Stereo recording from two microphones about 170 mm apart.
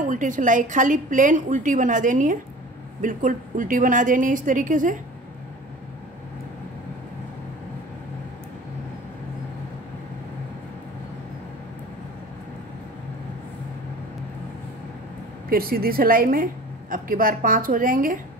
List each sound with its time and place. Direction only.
0.0 s a woman's voice: 50° right (ahead or behind)
15.5 s a woman's voice: 60° right (ahead or behind)